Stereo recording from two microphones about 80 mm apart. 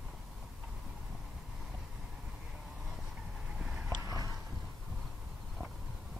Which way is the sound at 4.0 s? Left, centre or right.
Right.